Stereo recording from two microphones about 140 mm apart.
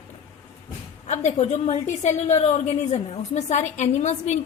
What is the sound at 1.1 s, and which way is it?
A woman's voice, 55° left (ahead or behind).